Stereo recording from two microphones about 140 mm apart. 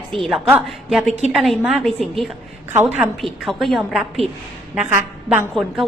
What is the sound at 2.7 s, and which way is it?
Speech, 15° right (ahead or behind).